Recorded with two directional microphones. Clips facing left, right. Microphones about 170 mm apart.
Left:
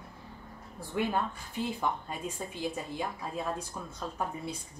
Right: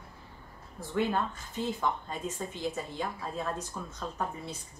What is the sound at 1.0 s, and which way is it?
A woman's voice, 10° left (ahead or behind).